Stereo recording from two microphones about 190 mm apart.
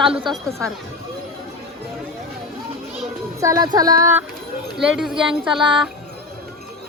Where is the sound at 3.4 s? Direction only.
20° right (ahead or behind).